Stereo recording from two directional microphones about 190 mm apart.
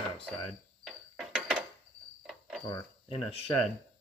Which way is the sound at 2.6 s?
25° left (ahead or behind).